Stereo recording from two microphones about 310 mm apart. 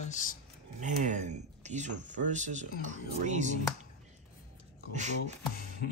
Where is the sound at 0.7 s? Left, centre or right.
Right.